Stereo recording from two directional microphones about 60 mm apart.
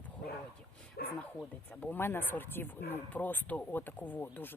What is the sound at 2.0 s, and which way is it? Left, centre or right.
Speech, left.